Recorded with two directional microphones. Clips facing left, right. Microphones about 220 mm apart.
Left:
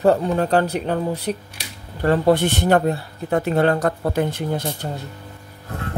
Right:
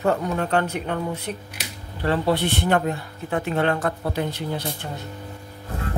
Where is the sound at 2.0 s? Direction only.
45° left (ahead or behind).